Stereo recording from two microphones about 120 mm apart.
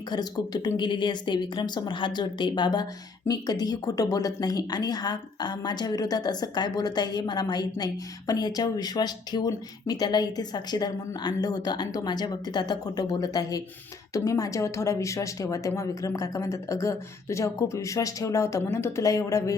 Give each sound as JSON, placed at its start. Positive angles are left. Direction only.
{"t": 0.1, "sound": "speech", "side_deg": 35}